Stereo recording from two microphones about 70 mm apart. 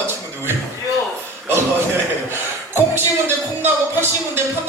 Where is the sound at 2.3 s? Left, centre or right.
Right.